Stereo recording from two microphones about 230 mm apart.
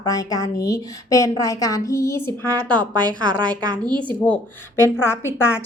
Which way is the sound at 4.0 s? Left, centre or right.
Centre.